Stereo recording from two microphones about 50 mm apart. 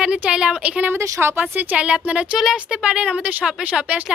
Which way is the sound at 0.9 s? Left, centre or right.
Right.